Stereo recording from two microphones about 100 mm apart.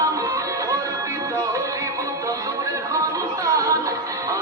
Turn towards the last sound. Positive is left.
turn(degrees=-35)  # may be behind; listen again after turning